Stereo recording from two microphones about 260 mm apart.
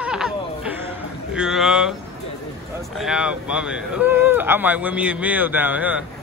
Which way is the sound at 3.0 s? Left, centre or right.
Centre.